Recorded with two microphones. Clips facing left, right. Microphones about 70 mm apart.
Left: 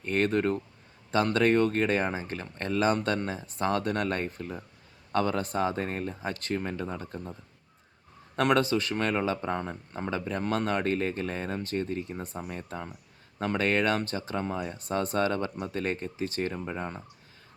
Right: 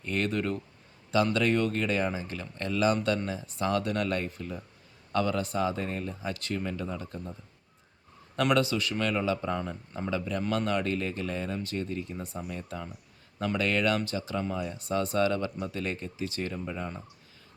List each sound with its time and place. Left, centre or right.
0.0 s speech: left
8.4 s speech: left